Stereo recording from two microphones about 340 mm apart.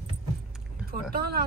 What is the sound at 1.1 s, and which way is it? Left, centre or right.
Speech, right.